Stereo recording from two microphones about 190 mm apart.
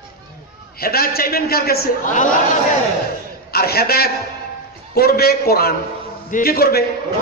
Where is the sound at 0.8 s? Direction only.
55° left (ahead or behind).